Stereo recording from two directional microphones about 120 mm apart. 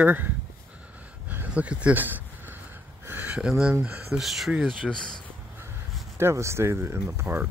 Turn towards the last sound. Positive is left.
turn(degrees=-20)  # may be behind; listen again after turning